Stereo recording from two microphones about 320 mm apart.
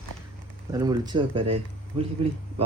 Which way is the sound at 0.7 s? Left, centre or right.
Centre.